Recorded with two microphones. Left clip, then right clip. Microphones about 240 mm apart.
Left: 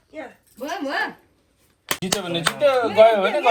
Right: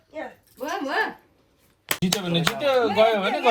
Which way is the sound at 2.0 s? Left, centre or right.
Left.